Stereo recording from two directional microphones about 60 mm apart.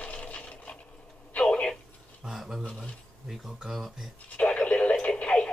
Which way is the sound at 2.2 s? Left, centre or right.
Centre.